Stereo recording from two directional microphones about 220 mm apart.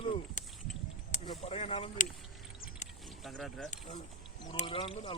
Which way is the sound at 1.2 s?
25° left (ahead or behind).